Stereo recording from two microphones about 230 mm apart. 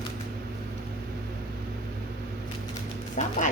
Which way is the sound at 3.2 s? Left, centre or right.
Left.